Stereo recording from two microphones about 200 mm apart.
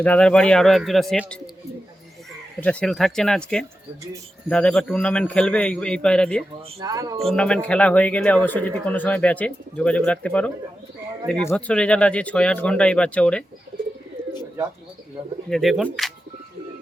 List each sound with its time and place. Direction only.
0.0 s a man's voice: 5° left (ahead or behind)
2.6 s a man's voice: 5° left (ahead or behind)
6.7 s speech: 15° right (ahead or behind)
7.3 s a man's voice: 5° left (ahead or behind)
15.4 s a man's voice: centre (ahead or behind)